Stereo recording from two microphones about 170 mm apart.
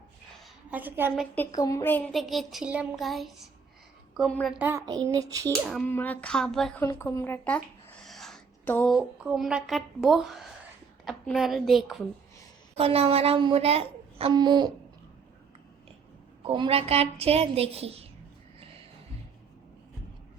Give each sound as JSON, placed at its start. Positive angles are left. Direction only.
{"t": 0.7, "sound": "a woman's voice", "side_deg": -10}
{"t": 1.4, "sound": "a woman's voice", "side_deg": 20}
{"t": 2.1, "sound": "speech", "side_deg": 0}
{"t": 4.5, "sound": "a woman's voice", "side_deg": -10}
{"t": 5.6, "sound": "a woman's voice", "side_deg": 0}
{"t": 6.8, "sound": "a woman's voice", "side_deg": 15}
{"t": 8.0, "sound": "a sound", "side_deg": 0}
{"t": 8.9, "sound": "speech", "side_deg": -5}
{"t": 12.7, "sound": "a woman's voice", "side_deg": -35}
{"t": 14.3, "sound": "speech", "side_deg": -25}
{"t": 16.4, "sound": "a woman's voice", "side_deg": -30}